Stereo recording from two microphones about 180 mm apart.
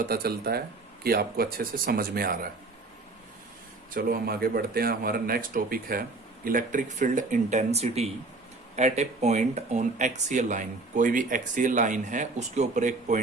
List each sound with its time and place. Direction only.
0.0 s speech: 55° right (ahead or behind)
3.9 s speech: 55° right (ahead or behind); by 13.1 s 40° right (ahead or behind)